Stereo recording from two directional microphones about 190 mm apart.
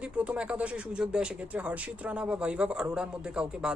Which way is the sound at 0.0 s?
5° right (ahead or behind).